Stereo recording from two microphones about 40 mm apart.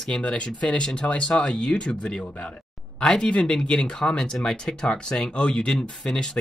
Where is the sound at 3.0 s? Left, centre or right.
Centre.